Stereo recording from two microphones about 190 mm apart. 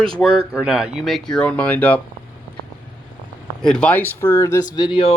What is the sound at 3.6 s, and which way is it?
Speech, 5° left (ahead or behind).